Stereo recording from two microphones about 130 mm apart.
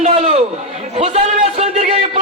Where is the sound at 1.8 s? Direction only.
60° right (ahead or behind).